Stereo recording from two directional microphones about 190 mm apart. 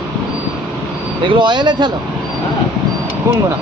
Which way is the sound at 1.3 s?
25° right (ahead or behind).